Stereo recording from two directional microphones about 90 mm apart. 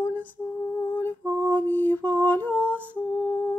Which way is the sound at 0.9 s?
20° left (ahead or behind).